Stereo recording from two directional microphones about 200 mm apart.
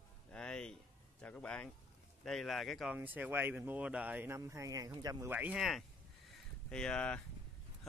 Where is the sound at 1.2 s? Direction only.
5° left (ahead or behind).